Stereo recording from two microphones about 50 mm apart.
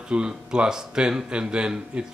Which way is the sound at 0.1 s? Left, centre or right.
Centre.